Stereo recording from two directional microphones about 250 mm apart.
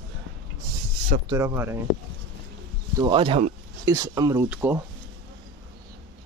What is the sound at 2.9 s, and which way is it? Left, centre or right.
Speech, centre.